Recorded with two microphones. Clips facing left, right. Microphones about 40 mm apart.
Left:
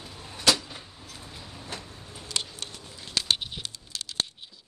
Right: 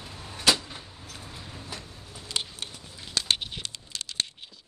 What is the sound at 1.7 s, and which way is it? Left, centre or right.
Vehicle, left.